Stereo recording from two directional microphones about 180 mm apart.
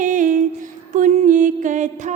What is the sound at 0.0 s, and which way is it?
Music, 45° right (ahead or behind).